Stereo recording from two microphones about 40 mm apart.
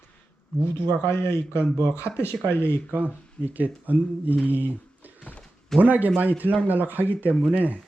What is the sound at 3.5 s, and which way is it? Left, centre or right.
Speech, right.